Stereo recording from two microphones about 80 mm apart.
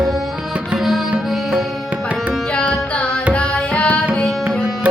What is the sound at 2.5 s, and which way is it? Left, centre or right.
Music, centre.